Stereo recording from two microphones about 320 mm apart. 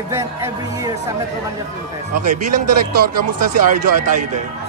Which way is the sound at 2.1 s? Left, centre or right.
Right.